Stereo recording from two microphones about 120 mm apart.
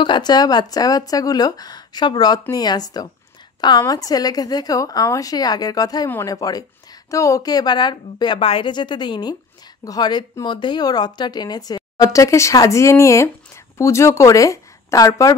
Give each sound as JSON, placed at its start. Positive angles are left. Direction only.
{"t": 0.0, "sound": "a woman's voice", "side_deg": 40}
{"t": 8.4, "sound": "a woman's voice", "side_deg": 50}